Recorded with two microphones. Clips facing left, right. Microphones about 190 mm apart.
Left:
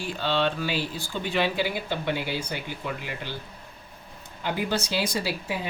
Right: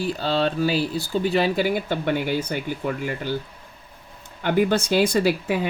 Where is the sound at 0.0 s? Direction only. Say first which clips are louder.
Right 4 dB; 40° right (ahead or behind).